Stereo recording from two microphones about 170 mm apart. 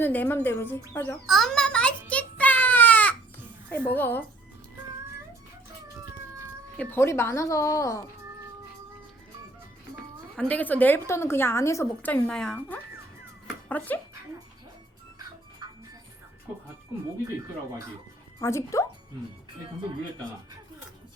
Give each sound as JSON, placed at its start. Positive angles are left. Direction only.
{"t": 0.0, "sound": "a woman's voice", "side_deg": 10}
{"t": 0.9, "sound": "a sound", "side_deg": 10}
{"t": 3.7, "sound": "a woman's voice", "side_deg": 10}
{"t": 6.7, "sound": "a woman's voice", "side_deg": 15}
{"t": 10.5, "sound": "a woman's voice", "side_deg": 10}
{"t": 13.7, "sound": "a woman's voice", "side_deg": 10}
{"t": 18.3, "sound": "a woman's voice", "side_deg": 15}